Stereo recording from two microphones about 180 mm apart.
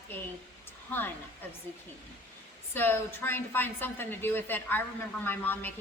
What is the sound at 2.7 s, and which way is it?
A woman's voice, 10° left (ahead or behind).